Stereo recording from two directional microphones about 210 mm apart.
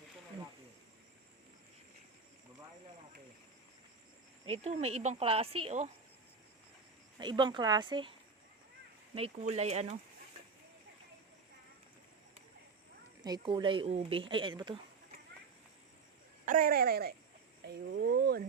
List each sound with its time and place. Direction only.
4.4 s a woman's voice: 30° right (ahead or behind)
7.2 s a woman's voice: 20° right (ahead or behind)
9.1 s speech: 30° right (ahead or behind)
13.2 s a woman's voice: 20° right (ahead or behind)
16.5 s speech: 40° right (ahead or behind)